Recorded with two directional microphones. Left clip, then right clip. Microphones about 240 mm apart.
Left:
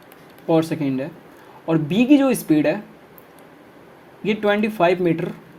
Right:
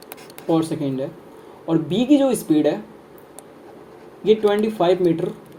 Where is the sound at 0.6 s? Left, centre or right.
Left.